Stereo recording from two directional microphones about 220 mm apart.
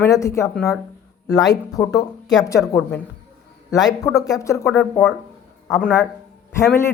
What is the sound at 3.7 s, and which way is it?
Speech, 15° left (ahead or behind).